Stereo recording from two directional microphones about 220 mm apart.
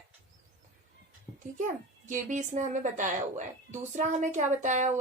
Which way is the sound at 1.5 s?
35° right (ahead or behind).